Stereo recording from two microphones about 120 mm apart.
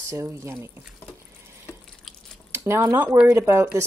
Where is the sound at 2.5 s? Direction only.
20° right (ahead or behind).